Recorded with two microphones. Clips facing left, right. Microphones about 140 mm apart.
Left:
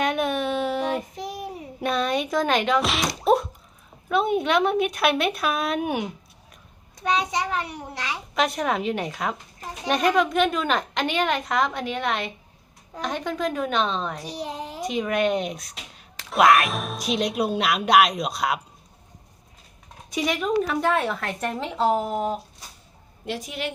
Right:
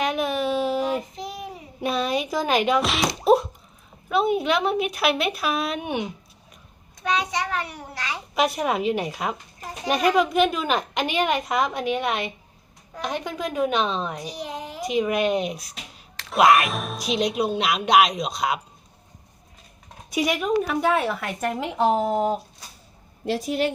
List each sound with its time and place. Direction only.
0.0 s a sound: 5° right (ahead or behind)
1.1 s child singing: 45° left (ahead or behind)
1.8 s speech: 5° right (ahead or behind)
4.1 s speech: 5° right (ahead or behind)
7.0 s a child's voice: 30° left (ahead or behind)
8.4 s a child's voice: 5° right (ahead or behind)
14.3 s a child's voice: 30° left (ahead or behind)
14.8 s speech: 5° right (ahead or behind)
20.1 s a child's voice: 10° right (ahead or behind)
22.1 s a woman's voice: 30° right (ahead or behind)